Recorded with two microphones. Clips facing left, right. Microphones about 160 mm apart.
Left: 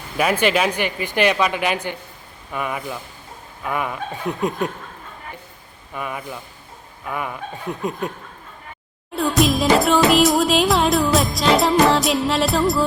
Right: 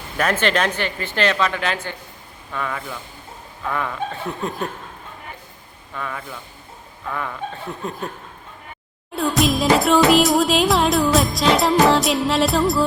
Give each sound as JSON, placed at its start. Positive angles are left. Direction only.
{"t": 0.2, "sound": "speech", "side_deg": 10}
{"t": 5.9, "sound": "speech", "side_deg": 15}
{"t": 9.1, "sound": "music", "side_deg": 0}